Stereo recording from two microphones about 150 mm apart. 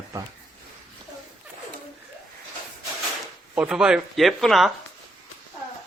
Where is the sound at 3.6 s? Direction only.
5° right (ahead or behind).